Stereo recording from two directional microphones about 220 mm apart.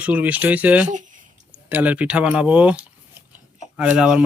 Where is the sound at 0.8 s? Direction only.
35° right (ahead or behind).